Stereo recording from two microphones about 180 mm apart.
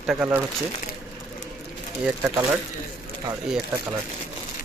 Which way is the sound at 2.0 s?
15° right (ahead or behind).